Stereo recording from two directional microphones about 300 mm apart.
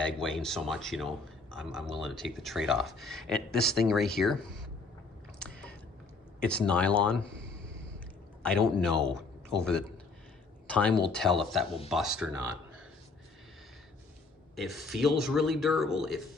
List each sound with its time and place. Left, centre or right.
0.0 s speech: centre
6.4 s speech: centre
8.4 s speech: centre
14.5 s speech: centre